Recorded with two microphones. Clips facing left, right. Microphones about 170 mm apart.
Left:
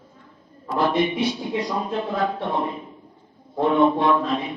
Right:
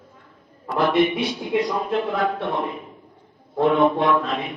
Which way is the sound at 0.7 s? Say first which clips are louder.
Right 2 dB; 60° right (ahead or behind).